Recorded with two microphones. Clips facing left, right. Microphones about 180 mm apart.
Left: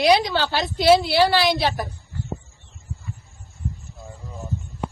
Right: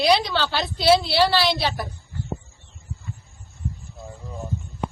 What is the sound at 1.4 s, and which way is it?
Speech, 50° left (ahead or behind).